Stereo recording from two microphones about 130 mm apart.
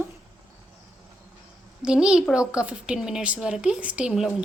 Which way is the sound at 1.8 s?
5° right (ahead or behind).